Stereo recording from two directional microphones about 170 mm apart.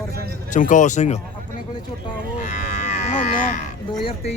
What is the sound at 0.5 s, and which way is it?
Speech, 50° left (ahead or behind).